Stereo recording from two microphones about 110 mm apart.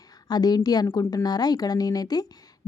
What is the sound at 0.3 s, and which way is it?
A woman's voice, 35° left (ahead or behind).